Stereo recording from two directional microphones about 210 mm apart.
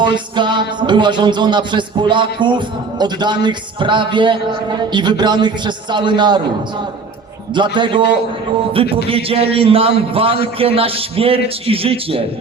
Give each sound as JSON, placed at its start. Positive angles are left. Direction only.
{"t": 0.0, "sound": "music", "side_deg": -20}
{"t": 7.5, "sound": "music", "side_deg": -20}
{"t": 9.0, "sound": "music", "side_deg": -25}